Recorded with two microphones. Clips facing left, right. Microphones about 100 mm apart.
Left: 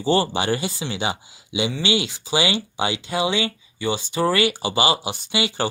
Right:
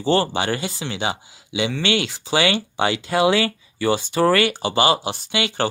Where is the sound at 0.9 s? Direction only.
25° right (ahead or behind).